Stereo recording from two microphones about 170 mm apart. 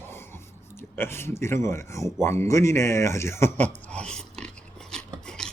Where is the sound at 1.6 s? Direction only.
15° left (ahead or behind).